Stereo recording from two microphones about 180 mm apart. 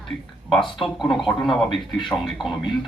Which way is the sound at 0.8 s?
Centre (ahead or behind).